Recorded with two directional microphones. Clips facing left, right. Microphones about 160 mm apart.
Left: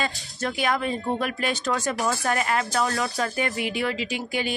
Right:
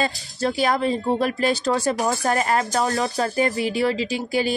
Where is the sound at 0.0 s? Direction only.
35° right (ahead or behind).